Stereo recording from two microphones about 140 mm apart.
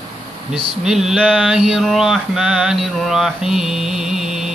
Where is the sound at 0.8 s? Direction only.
5° right (ahead or behind).